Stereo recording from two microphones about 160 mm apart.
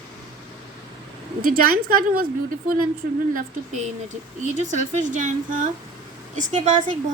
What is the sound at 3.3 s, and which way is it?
A woman's voice, 50° right (ahead or behind).